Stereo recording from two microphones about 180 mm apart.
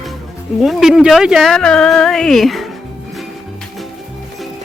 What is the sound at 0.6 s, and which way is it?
Speech, centre (ahead or behind).